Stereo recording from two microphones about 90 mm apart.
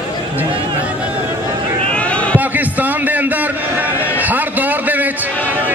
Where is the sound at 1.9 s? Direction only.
15° left (ahead or behind).